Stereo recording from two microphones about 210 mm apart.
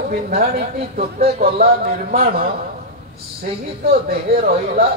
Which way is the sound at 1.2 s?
30° right (ahead or behind).